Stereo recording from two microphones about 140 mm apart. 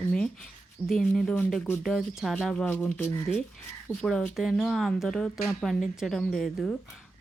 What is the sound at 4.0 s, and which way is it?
Speech, centre (ahead or behind).